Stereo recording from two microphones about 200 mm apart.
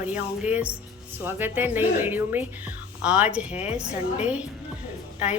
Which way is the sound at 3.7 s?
5° right (ahead or behind).